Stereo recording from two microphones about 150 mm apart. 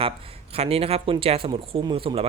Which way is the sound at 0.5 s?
45° right (ahead or behind).